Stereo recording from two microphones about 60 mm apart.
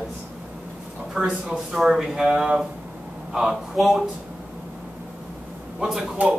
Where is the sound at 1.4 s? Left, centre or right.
Centre.